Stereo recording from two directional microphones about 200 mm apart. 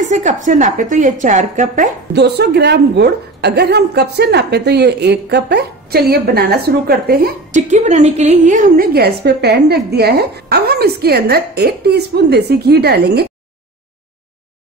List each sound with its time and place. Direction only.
0.0 s a woman's voice: 40° right (ahead or behind)
2.1 s a woman's voice: 55° right (ahead or behind)